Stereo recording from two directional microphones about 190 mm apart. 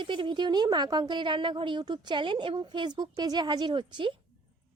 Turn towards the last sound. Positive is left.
turn(degrees=-25)  # may be behind; listen again after turning